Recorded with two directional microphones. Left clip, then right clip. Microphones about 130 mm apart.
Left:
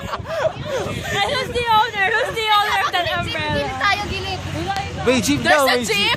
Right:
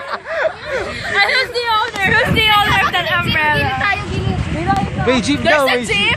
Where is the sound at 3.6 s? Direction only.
15° left (ahead or behind).